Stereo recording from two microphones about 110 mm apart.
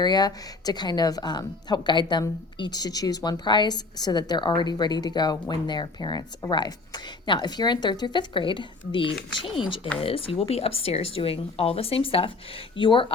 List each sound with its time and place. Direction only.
0.0 s a woman's voice: 40° left (ahead or behind)